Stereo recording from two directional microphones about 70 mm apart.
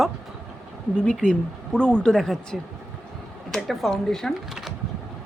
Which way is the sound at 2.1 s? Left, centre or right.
Centre.